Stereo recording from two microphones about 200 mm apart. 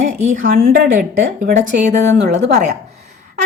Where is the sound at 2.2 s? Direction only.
55° right (ahead or behind).